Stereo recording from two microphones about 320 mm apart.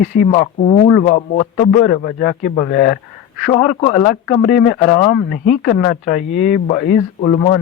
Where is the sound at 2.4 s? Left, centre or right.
Left.